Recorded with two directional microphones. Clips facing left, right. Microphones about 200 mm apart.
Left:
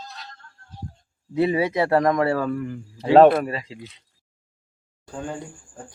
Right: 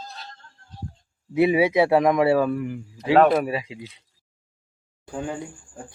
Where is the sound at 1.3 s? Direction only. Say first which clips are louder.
Right 3 dB; 10° right (ahead or behind).